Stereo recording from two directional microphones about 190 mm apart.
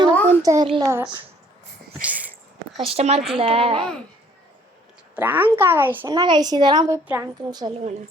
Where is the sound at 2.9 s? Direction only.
35° right (ahead or behind).